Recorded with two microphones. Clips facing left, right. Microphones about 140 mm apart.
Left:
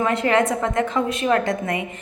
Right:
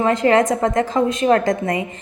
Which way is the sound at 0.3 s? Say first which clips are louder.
Right 5 dB; 35° right (ahead or behind).